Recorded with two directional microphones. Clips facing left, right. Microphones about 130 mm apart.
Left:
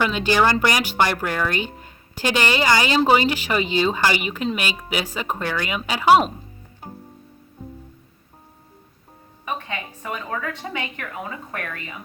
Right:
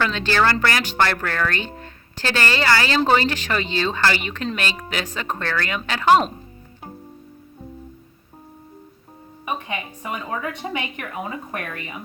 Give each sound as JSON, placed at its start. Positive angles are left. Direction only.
{"t": 0.0, "sound": "speech", "side_deg": 15}
{"t": 9.5, "sound": "a woman's voice", "side_deg": -15}